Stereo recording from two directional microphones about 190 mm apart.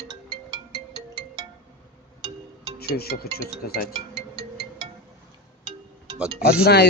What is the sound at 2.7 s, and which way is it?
Speech, 55° left (ahead or behind).